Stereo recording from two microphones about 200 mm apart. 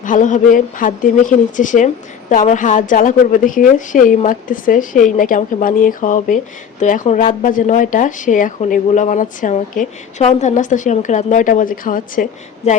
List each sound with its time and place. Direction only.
0.0 s speech: 40° left (ahead or behind)